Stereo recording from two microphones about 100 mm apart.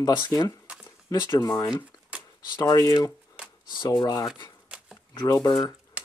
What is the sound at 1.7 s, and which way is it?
Shuffling cards, 10° right (ahead or behind).